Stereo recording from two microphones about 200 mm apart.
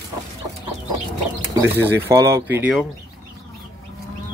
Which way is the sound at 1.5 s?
10° right (ahead or behind).